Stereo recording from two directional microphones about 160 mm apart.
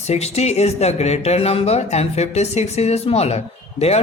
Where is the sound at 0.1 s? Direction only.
40° left (ahead or behind).